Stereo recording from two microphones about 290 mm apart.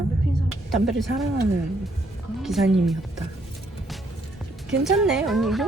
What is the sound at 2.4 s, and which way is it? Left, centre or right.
Speech, centre.